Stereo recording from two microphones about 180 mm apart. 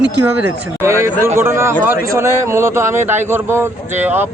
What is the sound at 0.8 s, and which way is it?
Speech, 15° right (ahead or behind).